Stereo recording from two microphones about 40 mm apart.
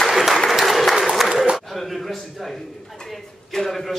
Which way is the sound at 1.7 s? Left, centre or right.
Centre.